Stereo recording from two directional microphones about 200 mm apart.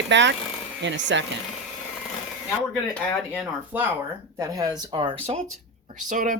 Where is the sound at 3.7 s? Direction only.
10° right (ahead or behind).